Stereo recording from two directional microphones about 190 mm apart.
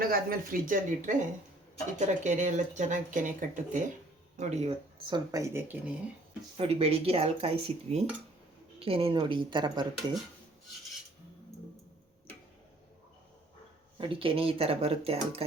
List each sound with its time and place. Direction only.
0.0 s speech: 50° right (ahead or behind); by 6.0 s 10° right (ahead or behind)
6.6 s speech: 30° right (ahead or behind)
14.0 s speech: 30° right (ahead or behind)